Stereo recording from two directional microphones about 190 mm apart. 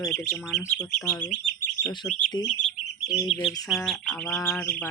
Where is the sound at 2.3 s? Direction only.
25° left (ahead or behind).